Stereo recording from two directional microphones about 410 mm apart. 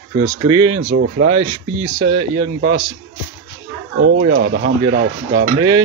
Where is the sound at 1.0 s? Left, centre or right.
Right.